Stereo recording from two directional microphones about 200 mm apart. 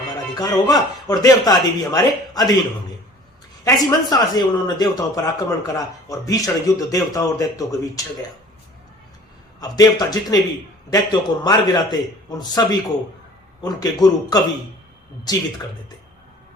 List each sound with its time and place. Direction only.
0.3 s speech: 20° left (ahead or behind)
3.6 s speech: 20° left (ahead or behind)
9.6 s speech: 20° left (ahead or behind)